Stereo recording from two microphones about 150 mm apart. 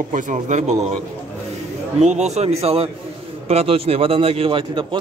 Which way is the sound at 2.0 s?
50° right (ahead or behind).